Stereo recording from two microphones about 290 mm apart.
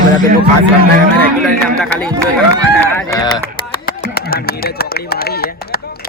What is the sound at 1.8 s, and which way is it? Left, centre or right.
Speech, centre.